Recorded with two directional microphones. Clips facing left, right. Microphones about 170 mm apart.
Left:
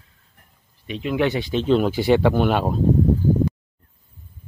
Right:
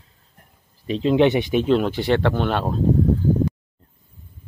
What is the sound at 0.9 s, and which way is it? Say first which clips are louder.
Speech: right 5 dB; 30° right (ahead or behind).